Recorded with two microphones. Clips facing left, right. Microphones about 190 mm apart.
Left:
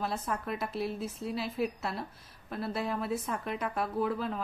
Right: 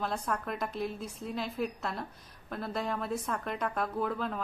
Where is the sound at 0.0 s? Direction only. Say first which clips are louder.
Even; 5° left (ahead or behind).